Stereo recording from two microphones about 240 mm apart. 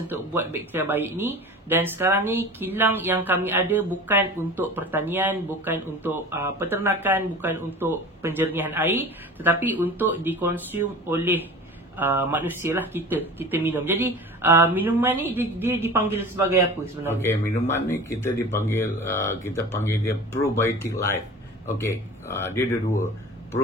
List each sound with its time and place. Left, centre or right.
0.1 s speech: centre
17.1 s speech: centre